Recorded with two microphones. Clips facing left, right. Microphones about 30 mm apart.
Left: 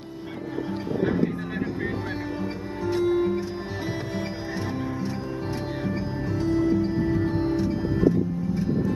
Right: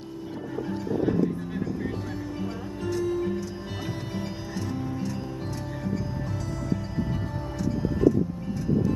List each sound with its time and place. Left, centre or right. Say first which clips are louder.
0.7 s music: even; left
2.9 s music: left 5 dB; left
6.4 s music: left 13 dB; left